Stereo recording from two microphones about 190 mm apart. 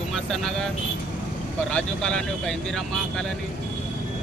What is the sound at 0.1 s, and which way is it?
Speech, centre (ahead or behind).